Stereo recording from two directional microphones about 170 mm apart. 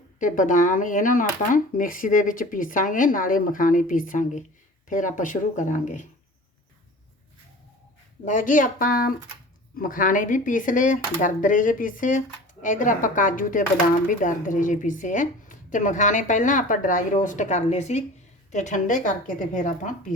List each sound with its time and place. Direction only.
0.2 s speech: 50° left (ahead or behind)
8.2 s speech: 50° left (ahead or behind)